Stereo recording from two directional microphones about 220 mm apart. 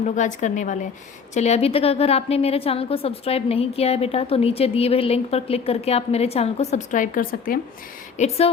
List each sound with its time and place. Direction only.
0.0 s a woman's voice: 35° left (ahead or behind)